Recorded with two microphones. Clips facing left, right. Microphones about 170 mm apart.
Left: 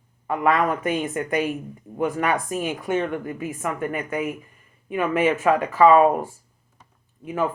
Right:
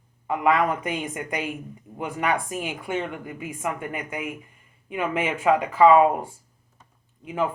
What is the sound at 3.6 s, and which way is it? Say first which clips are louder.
Speech: left 2 dB; 20° right (ahead or behind).